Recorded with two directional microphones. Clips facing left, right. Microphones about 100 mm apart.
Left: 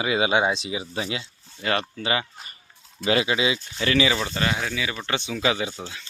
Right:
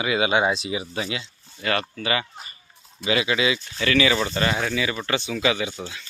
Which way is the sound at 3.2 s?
25° left (ahead or behind).